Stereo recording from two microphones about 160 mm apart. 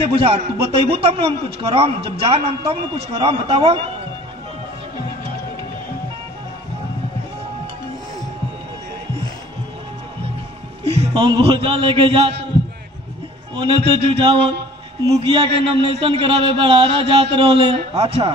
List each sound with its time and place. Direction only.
0.0 s a man's voice: 35° right (ahead or behind)
10.8 s a man's voice: 35° right (ahead or behind)
13.6 s a man's voice: 35° right (ahead or behind)